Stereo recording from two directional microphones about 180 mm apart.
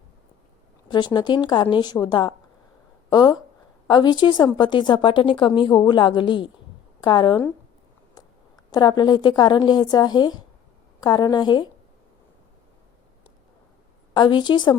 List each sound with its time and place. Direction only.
0.9 s a woman's voice: 25° left (ahead or behind)
8.7 s a woman's voice: 25° left (ahead or behind)
14.1 s a woman's voice: 25° left (ahead or behind)